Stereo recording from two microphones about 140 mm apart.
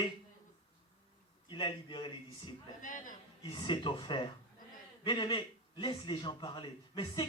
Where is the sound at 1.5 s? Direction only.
35° left (ahead or behind).